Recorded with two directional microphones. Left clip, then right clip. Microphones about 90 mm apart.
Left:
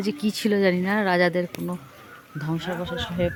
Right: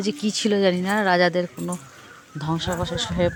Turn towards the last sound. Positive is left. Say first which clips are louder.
# right 3 dB
turn(degrees=-30)  # may be behind; listen again after turning